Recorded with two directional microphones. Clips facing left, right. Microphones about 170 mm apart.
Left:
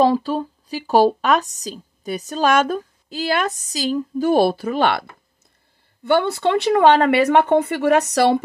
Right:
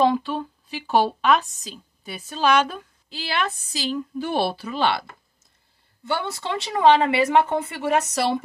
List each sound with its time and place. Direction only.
0.0 s a woman's voice: 40° left (ahead or behind); by 5.0 s 55° left (ahead or behind)
6.0 s speech: 60° left (ahead or behind)